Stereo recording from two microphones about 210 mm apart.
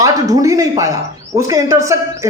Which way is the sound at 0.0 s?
15° right (ahead or behind).